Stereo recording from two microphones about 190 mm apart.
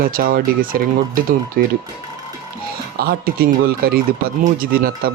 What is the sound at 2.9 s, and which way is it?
Speech, 55° right (ahead or behind).